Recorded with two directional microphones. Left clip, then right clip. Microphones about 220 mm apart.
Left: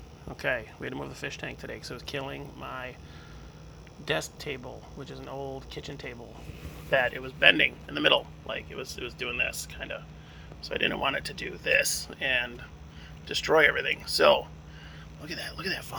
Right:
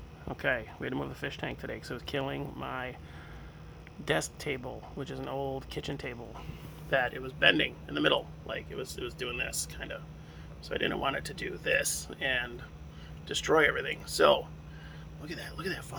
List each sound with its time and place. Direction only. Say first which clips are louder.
0.3 s speech: left 1 dB; 10° right (ahead or behind)
4.0 s speech: even; 15° right (ahead or behind)
6.9 s speech: left 4 dB; centre (ahead or behind)